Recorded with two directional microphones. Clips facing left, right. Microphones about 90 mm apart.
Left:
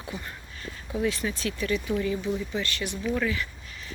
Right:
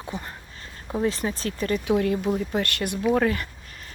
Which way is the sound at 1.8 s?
65° right (ahead or behind).